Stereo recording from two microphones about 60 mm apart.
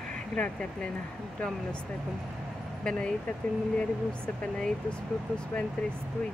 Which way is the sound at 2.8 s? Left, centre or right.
Centre.